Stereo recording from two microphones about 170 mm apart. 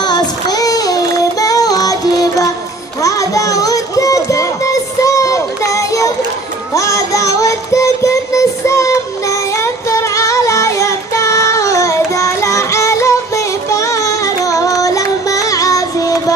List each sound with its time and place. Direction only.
0.0 s child singing: 25° left (ahead or behind)
3.0 s music: 20° left (ahead or behind)